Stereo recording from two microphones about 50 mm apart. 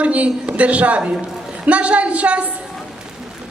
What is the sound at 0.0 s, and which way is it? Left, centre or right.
A woman's voice, right.